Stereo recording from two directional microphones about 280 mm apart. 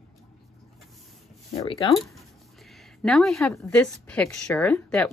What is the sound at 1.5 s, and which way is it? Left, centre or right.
Speech, centre.